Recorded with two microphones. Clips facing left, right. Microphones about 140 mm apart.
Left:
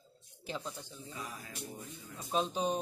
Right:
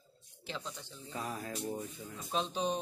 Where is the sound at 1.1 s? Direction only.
55° right (ahead or behind).